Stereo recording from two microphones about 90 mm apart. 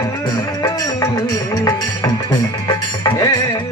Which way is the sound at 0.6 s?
45° left (ahead or behind).